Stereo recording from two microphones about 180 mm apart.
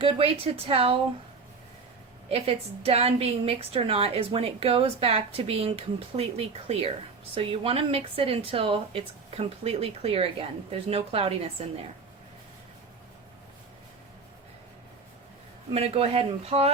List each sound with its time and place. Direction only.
0.0 s a woman's voice: 30° right (ahead or behind)
2.3 s a woman's voice: 35° right (ahead or behind)
15.7 s a woman's voice: 35° right (ahead or behind)